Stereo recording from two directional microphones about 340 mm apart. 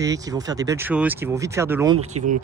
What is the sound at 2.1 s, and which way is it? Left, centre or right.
Speech, right.